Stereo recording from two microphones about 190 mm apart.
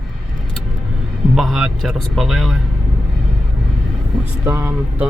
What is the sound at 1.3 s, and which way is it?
A man's voice, centre (ahead or behind).